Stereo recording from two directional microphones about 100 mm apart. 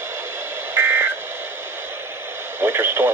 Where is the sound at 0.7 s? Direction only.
20° right (ahead or behind).